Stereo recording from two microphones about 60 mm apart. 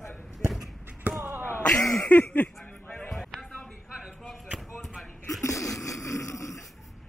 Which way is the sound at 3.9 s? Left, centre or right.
Centre.